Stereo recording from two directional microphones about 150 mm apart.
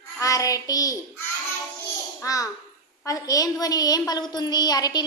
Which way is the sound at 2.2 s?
20° left (ahead or behind).